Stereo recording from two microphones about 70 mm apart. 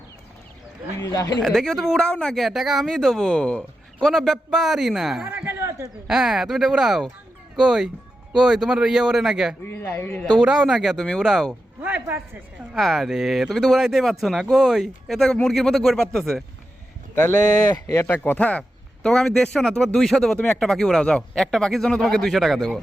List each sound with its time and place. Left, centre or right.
0.9 s speech: left
1.4 s speech: centre
2.5 s speech: centre
5.2 s a sound: right
6.1 s speech: centre
9.6 s speech: left
10.3 s speech: centre
11.8 s speech: right
12.7 s speech: centre
17.8 s speech: left
18.1 s speech: left
19.0 s speech: centre